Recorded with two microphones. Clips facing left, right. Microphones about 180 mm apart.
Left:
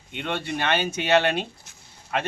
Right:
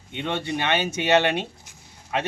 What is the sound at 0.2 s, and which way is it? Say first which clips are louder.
Speech: right 1 dB; 20° right (ahead or behind).